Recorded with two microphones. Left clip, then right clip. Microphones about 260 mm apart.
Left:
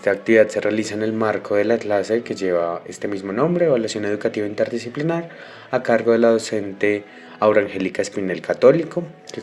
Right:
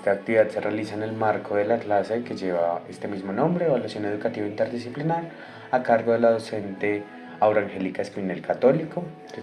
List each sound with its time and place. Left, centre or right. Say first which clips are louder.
0.0 s speech: left 5 dB; left
0.6 s speech: left 6 dB; left